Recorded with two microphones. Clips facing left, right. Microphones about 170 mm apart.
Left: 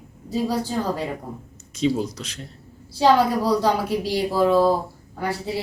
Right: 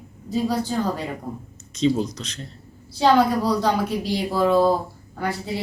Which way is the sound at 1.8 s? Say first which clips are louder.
Right 1 dB; 10° left (ahead or behind).